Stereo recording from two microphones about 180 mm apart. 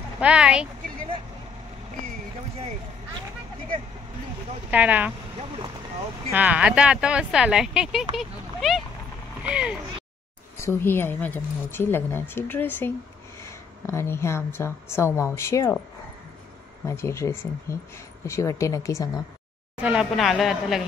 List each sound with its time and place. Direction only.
0.2 s speech: 5° right (ahead or behind)
4.6 s speech: 10° right (ahead or behind)
6.3 s speech: 5° right (ahead or behind)
10.6 s a woman's voice: 15° left (ahead or behind)
16.8 s a woman's voice: 15° left (ahead or behind)
19.8 s speech: 5° right (ahead or behind)